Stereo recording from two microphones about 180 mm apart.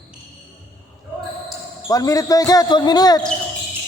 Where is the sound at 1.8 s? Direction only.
20° left (ahead or behind).